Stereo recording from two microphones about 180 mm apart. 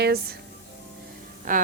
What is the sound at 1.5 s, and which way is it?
Speech, 50° right (ahead or behind).